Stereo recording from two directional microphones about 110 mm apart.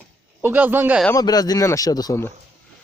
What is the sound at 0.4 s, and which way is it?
Speech, 15° right (ahead or behind).